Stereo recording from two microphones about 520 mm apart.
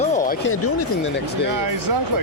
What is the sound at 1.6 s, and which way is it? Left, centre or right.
Speech, right.